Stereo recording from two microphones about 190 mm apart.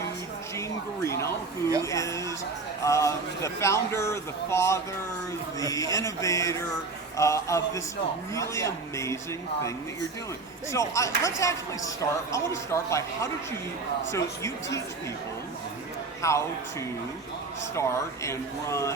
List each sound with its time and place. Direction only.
1.0 s a sound: 15° left (ahead or behind)
2.8 s a man's voice: 15° left (ahead or behind)
10.7 s a man's voice: 15° left (ahead or behind)
16.2 s a man's voice: 15° left (ahead or behind)
17.7 s a man's voice: 15° left (ahead or behind)